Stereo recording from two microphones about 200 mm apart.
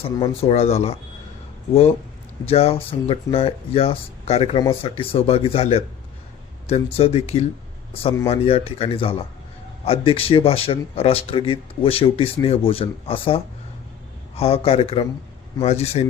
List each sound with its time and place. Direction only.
0.0 s speech: 30° left (ahead or behind)
2.5 s speech: 30° left (ahead or behind)